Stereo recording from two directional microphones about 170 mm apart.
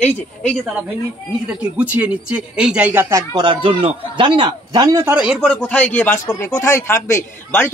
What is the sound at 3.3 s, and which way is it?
A man's voice, 25° right (ahead or behind).